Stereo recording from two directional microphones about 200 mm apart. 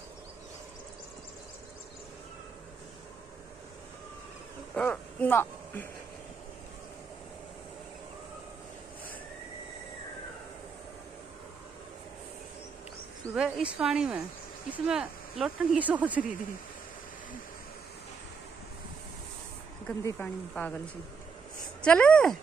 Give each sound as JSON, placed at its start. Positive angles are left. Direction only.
{"t": 4.7, "sound": "speech", "side_deg": 10}
{"t": 13.3, "sound": "speech", "side_deg": -5}
{"t": 19.9, "sound": "speech", "side_deg": 10}
{"t": 21.8, "sound": "speech", "side_deg": 5}